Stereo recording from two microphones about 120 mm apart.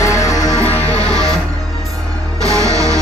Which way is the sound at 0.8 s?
60° left (ahead or behind).